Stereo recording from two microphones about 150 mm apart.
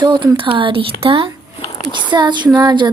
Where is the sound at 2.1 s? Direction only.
30° right (ahead or behind).